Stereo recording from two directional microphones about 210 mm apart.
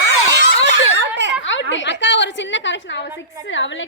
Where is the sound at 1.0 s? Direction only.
60° right (ahead or behind).